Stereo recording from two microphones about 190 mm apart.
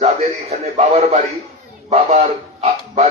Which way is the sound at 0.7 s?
35° right (ahead or behind).